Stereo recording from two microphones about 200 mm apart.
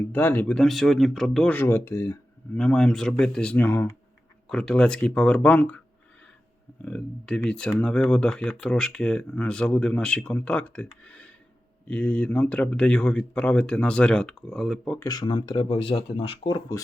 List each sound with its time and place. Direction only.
0.1 s speech: 10° left (ahead or behind)
6.8 s speech: 5° left (ahead or behind)
11.0 s a sound: 5° left (ahead or behind)
11.9 s speech: 5° left (ahead or behind)
14.9 s speech: 20° left (ahead or behind)